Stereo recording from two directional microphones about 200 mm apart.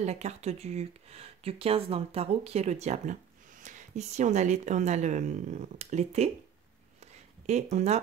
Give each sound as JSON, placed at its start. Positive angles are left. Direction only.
{"t": 0.0, "sound": "speech", "side_deg": -35}
{"t": 7.7, "sound": "speech", "side_deg": -35}